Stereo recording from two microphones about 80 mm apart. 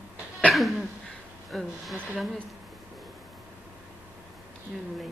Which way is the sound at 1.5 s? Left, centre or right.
Centre.